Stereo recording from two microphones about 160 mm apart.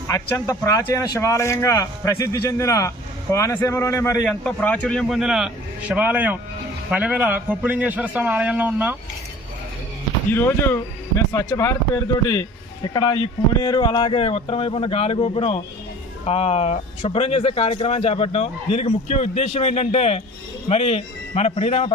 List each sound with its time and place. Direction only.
0.1 s a man's voice: 20° left (ahead or behind)
4.3 s a man's voice: 10° left (ahead or behind); by 9.0 s 10° right (ahead or behind)
10.3 s a man's voice: 15° left (ahead or behind); by 21.9 s 40° left (ahead or behind)